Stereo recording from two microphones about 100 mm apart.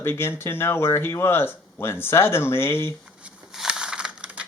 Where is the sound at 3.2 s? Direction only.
10° right (ahead or behind).